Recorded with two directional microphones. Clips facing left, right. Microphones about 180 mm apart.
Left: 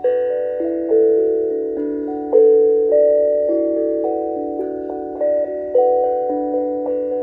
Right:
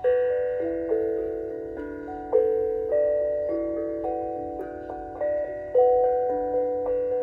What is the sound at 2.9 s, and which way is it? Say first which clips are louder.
Music: left 10 dB; 40° left (ahead or behind).